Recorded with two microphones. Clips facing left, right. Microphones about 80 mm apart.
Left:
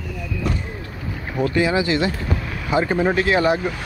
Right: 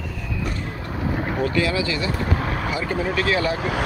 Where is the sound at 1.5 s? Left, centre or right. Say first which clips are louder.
Left 4 dB; left.